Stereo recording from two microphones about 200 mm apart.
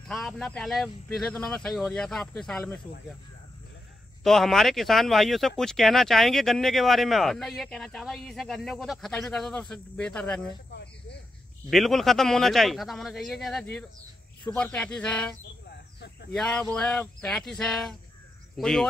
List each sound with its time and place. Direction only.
0.1 s speech: centre (ahead or behind)
4.2 s speech: centre (ahead or behind)
11.7 s speech: centre (ahead or behind)
16.0 s a sound: 55° left (ahead or behind)
16.3 s speech: 5° left (ahead or behind)